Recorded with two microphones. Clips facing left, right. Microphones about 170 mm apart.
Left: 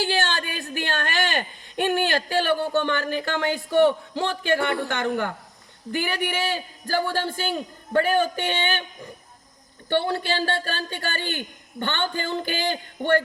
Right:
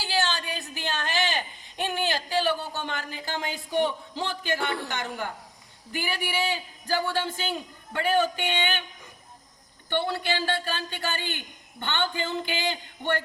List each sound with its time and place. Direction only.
0.0 s a man's voice: 55° left (ahead or behind)
10.3 s a man's voice: 45° left (ahead or behind)